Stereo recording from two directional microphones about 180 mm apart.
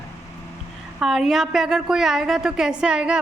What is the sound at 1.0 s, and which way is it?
A woman's voice, 5° right (ahead or behind).